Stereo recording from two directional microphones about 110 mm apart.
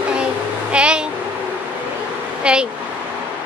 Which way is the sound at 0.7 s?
10° right (ahead or behind).